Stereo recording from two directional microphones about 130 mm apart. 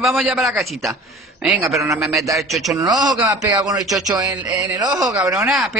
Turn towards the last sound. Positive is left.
turn(degrees=0)  # may be behind; listen again after turning